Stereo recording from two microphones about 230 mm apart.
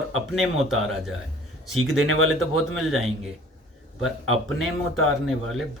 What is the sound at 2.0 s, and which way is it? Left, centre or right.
Speech, right.